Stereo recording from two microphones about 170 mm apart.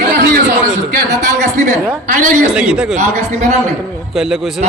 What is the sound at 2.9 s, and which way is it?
Speech, 40° right (ahead or behind).